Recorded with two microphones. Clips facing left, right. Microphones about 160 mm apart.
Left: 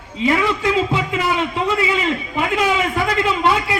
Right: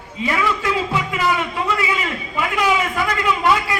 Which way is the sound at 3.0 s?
25° left (ahead or behind).